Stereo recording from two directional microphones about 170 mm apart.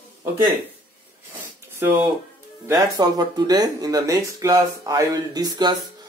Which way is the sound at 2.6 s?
20° right (ahead or behind).